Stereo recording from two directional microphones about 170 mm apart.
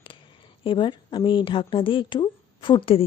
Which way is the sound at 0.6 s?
30° left (ahead or behind).